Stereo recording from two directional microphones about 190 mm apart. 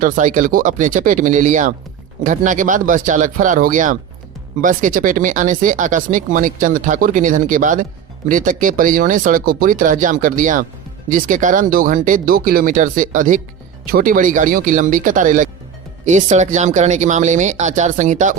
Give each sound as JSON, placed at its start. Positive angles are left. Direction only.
{"t": 0.0, "sound": "speech", "side_deg": -40}